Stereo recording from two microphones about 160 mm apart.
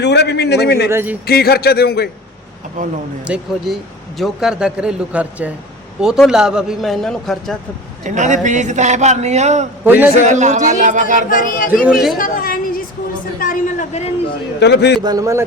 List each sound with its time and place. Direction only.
0.0 s a man's voice: 90° left
0.9 s speech: 15° right (ahead or behind)
1.3 s a man's voice: 75° left (ahead or behind)
2.8 s speech: 55° right (ahead or behind)
3.2 s a man's voice: 5° right (ahead or behind)
8.0 s a man's voice: 50° right (ahead or behind)
9.8 s a man's voice: 10° right (ahead or behind)
10.2 s a man's voice: 45° right (ahead or behind)
11.3 s speech: 60° left (ahead or behind)
11.9 s a man's voice: centre (ahead or behind)
12.1 s a woman's voice: 60° left (ahead or behind)
14.6 s a man's voice: 90° left
15.0 s a man's voice: 20° right (ahead or behind)